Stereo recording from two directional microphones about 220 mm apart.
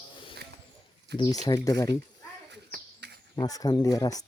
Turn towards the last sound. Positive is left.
turn(degrees=15)  # may be behind; listen again after turning